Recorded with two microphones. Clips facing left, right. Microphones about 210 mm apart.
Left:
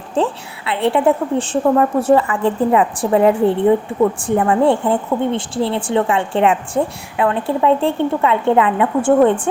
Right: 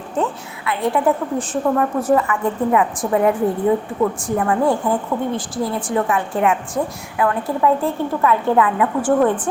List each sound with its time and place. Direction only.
0.2 s a woman's voice: 30° left (ahead or behind)